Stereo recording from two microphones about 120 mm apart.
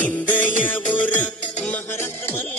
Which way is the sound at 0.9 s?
90° left.